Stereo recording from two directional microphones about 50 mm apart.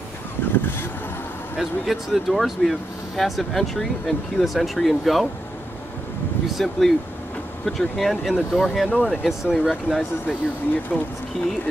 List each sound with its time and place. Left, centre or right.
0.5 s speech: left
1.6 s speech: centre
6.5 s speech: centre
8.8 s speech: centre
10.2 s speech: left